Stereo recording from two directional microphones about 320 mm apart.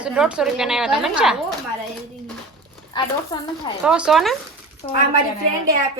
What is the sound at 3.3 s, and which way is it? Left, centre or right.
Speech, centre.